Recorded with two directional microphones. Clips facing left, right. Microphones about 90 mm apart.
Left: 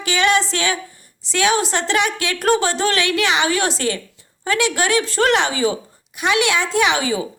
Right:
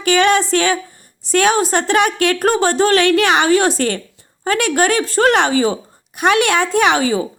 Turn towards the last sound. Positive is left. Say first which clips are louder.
# right 4 dB
turn(degrees=-45)  # may be behind; listen again after turning